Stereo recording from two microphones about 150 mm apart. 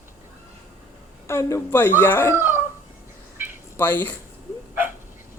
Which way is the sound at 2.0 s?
15° left (ahead or behind).